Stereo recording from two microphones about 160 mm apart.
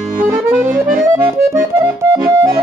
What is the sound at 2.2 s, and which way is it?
Music, 20° right (ahead or behind).